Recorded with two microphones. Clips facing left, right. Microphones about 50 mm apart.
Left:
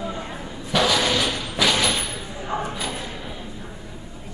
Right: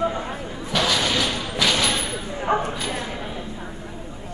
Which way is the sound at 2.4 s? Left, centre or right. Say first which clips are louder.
Right 5 dB; right.